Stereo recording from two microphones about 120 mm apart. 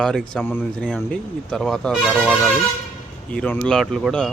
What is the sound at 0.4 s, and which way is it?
Speech, 15° left (ahead or behind).